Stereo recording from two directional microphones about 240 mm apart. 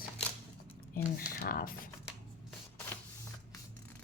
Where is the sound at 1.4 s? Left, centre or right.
Left.